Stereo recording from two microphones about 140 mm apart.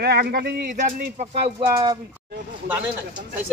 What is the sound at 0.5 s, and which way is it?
Speech, 90° right.